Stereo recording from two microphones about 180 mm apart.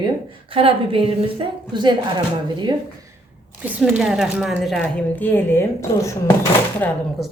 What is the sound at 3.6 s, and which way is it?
Speech, 5° right (ahead or behind).